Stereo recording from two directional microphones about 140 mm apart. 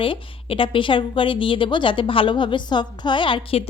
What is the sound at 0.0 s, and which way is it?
A woman's voice, 40° left (ahead or behind).